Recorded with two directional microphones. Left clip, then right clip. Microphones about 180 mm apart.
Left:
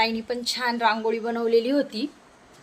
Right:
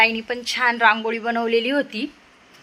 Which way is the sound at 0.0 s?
5° right (ahead or behind).